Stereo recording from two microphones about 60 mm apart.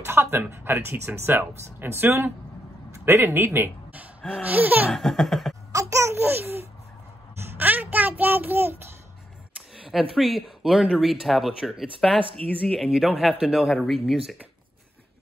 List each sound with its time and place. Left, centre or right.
0.0 s speech: right
4.4 s laughter: right
4.9 s speech: centre
5.7 s babbling: right
6.1 s a child's voice: right
9.8 s speech: centre
12.8 s a man's voice: centre